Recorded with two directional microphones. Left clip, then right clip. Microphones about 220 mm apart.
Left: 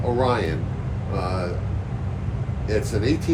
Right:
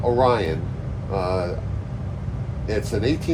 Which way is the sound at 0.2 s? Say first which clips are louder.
Right 3 dB; 25° right (ahead or behind).